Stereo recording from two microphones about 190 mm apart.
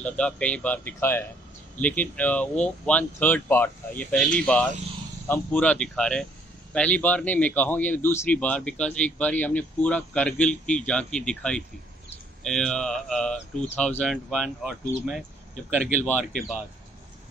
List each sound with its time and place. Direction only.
0.0 s a man's voice: 5° left (ahead or behind)